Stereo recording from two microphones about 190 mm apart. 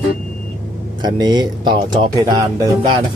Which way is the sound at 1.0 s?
20° right (ahead or behind).